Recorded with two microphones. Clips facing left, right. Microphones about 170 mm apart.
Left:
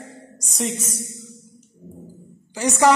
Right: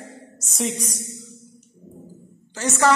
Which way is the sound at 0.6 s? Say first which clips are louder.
Even; centre (ahead or behind).